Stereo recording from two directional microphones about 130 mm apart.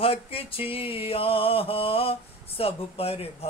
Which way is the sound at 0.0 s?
45° left (ahead or behind).